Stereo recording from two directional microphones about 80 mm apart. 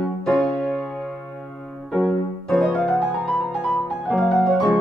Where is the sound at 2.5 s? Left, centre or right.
Centre.